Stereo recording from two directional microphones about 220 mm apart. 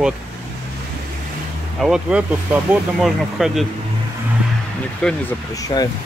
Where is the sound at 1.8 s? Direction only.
5° right (ahead or behind).